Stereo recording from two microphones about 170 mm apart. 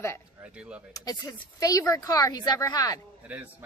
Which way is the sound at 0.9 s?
20° left (ahead or behind).